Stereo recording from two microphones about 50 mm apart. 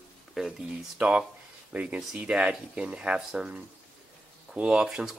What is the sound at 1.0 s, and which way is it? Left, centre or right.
Speech, right.